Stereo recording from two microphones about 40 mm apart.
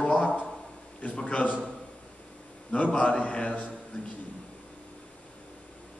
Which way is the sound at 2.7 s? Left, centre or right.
Left.